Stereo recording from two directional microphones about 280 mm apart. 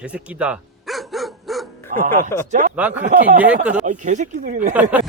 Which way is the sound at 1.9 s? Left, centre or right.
Right.